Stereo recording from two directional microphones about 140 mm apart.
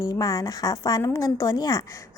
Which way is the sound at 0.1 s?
25° left (ahead or behind).